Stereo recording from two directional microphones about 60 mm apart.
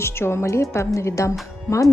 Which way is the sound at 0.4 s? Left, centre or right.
Left.